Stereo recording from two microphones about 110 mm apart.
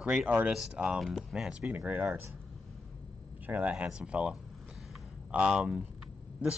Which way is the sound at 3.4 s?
15° right (ahead or behind).